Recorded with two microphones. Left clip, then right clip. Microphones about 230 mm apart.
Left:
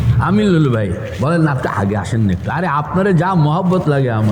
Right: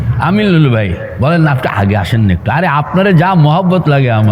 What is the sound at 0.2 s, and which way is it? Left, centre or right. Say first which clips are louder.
A man's voice: right 3 dB; right.